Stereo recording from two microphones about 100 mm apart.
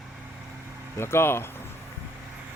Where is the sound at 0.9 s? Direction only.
25° left (ahead or behind).